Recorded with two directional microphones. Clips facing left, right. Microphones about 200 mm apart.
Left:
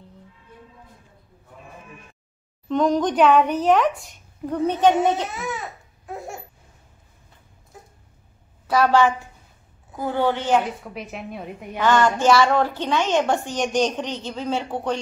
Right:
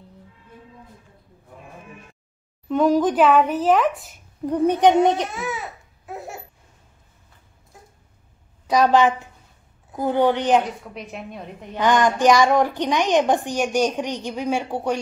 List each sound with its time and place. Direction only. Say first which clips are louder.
2.7 s speech: right 2 dB; 10° right (ahead or behind)
4.5 s a woman's voice: right 2 dB; 15° right (ahead or behind)
5.3 s speech: right 1 dB; centre (ahead or behind)
6.0 s laughter: even; centre (ahead or behind)
8.6 s a woman's voice: right 1 dB; 15° right (ahead or behind)
10.9 s speech: left 1 dB; 5° left (ahead or behind)
11.8 s a woman's voice: right 1 dB; 15° right (ahead or behind)